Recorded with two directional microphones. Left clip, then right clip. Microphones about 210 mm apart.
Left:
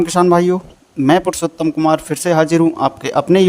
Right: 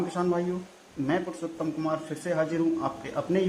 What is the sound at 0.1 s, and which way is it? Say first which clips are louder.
A man's voice: left 16 dB; 45° left (ahead or behind).